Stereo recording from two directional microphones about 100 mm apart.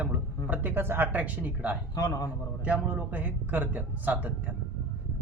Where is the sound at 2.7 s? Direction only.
15° right (ahead or behind).